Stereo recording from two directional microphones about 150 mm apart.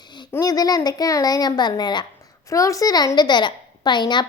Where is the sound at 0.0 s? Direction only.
30° left (ahead or behind).